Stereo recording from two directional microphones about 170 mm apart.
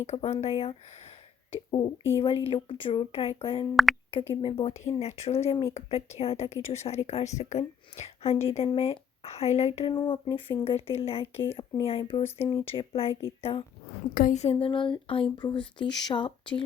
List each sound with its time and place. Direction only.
0.0 s a woman's voice: 40° left (ahead or behind)
9.9 s a woman's voice: 25° left (ahead or behind)
12.2 s a woman's voice: 20° left (ahead or behind)
14.1 s a woman's voice: 55° left (ahead or behind)
14.6 s speech: 30° left (ahead or behind)